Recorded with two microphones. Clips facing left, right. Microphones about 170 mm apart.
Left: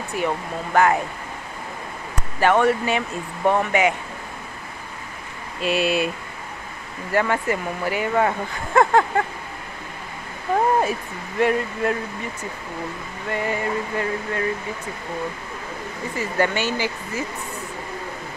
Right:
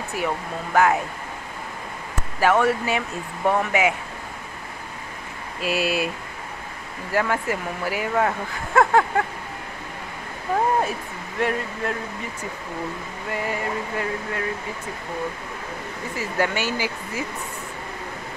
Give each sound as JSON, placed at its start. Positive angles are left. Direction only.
{"t": 0.7, "sound": "speech", "side_deg": -5}
{"t": 2.1, "sound": "speech", "side_deg": -5}
{"t": 5.6, "sound": "speech", "side_deg": -5}
{"t": 7.1, "sound": "speech", "side_deg": -5}
{"t": 10.8, "sound": "speech", "side_deg": 0}
{"t": 13.3, "sound": "speech", "side_deg": 0}
{"t": 16.2, "sound": "speech", "side_deg": -5}